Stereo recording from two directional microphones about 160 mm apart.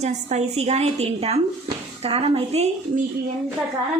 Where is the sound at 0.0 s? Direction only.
45° right (ahead or behind).